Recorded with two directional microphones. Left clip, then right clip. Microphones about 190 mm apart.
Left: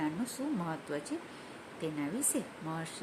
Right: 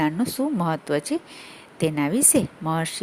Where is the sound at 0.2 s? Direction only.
50° right (ahead or behind).